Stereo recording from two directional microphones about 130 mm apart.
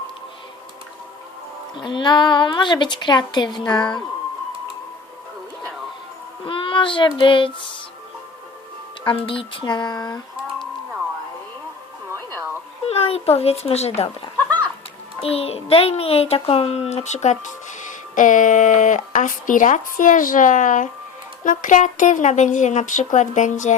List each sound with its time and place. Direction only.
1.8 s a woman's voice: 35° left (ahead or behind)
6.4 s child singing: 40° left (ahead or behind)
7.2 s a woman's voice: 40° left (ahead or behind)
9.0 s a woman's voice: 45° left (ahead or behind)
12.9 s a child's voice: 50° left (ahead or behind)
14.3 s chicken: 10° left (ahead or behind)
15.2 s a child's voice: 50° left (ahead or behind); by 20.9 s 75° left (ahead or behind)
21.4 s a child's voice: 90° left; by 23.7 s 70° left (ahead or behind)